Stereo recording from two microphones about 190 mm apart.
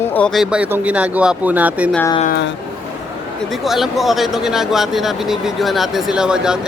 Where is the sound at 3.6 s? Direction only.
Centre (ahead or behind).